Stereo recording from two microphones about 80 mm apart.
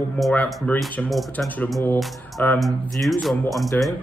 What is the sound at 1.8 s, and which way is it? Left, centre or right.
Speech, left.